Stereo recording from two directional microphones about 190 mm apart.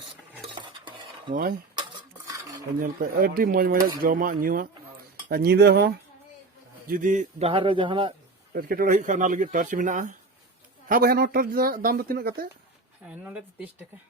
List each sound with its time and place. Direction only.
0.5 s stir: 25° right (ahead or behind)
1.3 s speech: 50° right (ahead or behind)
2.8 s speech: 50° right (ahead or behind)
5.3 s cutlery: 55° right (ahead or behind)
6.8 s a man's voice: 45° right (ahead or behind); by 8.1 s 25° right (ahead or behind)
8.5 s speech: 50° right (ahead or behind)
13.1 s speech: 5° right (ahead or behind)